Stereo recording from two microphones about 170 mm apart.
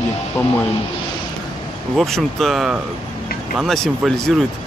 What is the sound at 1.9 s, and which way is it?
Speech, centre (ahead or behind).